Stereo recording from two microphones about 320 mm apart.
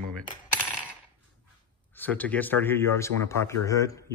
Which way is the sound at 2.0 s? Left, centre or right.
Centre.